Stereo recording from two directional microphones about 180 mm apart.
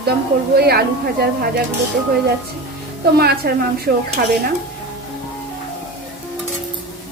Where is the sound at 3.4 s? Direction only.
60° right (ahead or behind).